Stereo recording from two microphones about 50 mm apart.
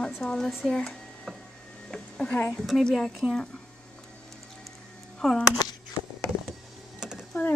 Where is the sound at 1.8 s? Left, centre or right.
Centre.